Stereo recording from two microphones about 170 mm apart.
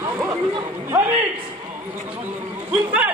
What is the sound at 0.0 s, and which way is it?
Chatter, 15° right (ahead or behind).